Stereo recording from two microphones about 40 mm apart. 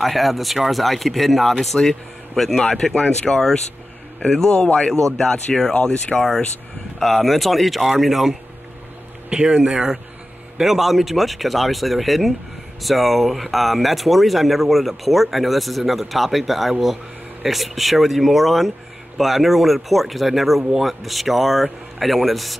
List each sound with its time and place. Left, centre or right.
0.0 s speech: centre
9.3 s speech: right
10.6 s speech: centre